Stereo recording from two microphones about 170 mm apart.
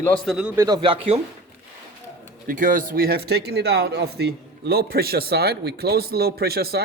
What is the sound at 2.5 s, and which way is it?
Speech, 50° right (ahead or behind).